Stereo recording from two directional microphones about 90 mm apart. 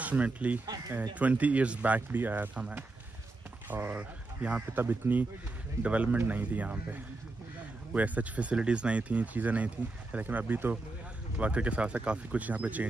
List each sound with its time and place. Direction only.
0.0 s speech: 15° right (ahead or behind)
4.8 s speech: 25° right (ahead or behind)